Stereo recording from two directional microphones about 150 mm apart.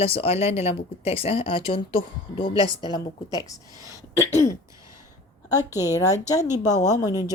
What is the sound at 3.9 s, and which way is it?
Throat clearing, 20° left (ahead or behind).